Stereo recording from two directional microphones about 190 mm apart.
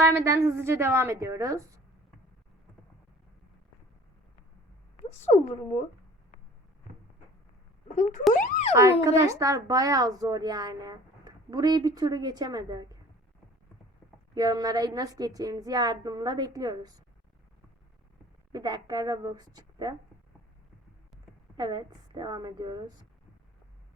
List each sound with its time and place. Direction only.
0.0 s speech: 15° right (ahead or behind)
4.9 s speech: 35° left (ahead or behind)
7.9 s speech: 40° left (ahead or behind)
8.3 s a sound: 40° left (ahead or behind)
8.7 s a child's voice: 15° right (ahead or behind)
14.3 s a child's voice: 20° right (ahead or behind)
18.5 s a child's voice: 20° right (ahead or behind)
21.6 s a child's voice: 20° right (ahead or behind)